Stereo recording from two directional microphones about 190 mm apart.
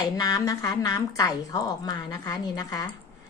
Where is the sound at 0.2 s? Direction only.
20° left (ahead or behind).